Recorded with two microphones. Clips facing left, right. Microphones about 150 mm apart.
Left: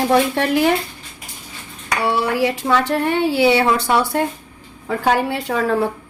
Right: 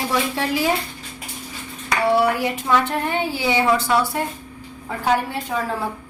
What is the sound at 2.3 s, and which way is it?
A woman's voice, 90° left.